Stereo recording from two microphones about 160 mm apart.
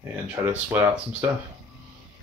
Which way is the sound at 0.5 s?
10° right (ahead or behind).